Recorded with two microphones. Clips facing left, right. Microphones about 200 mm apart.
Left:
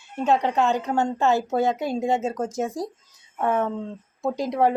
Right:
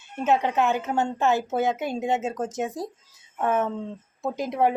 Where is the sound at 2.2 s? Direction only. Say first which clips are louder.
Left 2 dB; centre (ahead or behind).